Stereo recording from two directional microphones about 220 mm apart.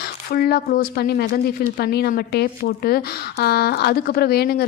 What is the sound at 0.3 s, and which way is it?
A woman's voice, 45° left (ahead or behind).